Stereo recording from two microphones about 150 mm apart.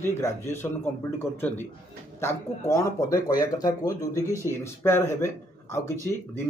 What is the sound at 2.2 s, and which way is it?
Speech, 20° left (ahead or behind).